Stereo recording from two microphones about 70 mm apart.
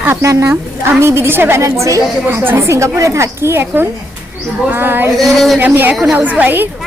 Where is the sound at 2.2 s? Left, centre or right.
Right.